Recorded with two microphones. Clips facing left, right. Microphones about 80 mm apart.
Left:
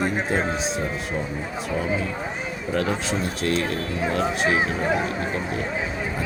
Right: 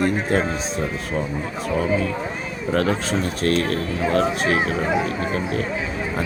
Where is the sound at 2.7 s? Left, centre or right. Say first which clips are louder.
Right 3 dB; right.